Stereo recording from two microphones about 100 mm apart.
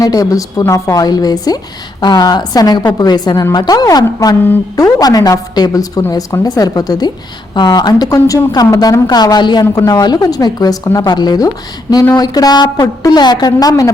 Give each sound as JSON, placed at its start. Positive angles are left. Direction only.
{"t": 0.0, "sound": "a woman's voice", "side_deg": 35}